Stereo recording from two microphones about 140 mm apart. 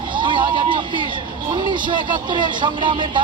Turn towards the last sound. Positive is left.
turn(degrees=-35)  # may be behind; listen again after turning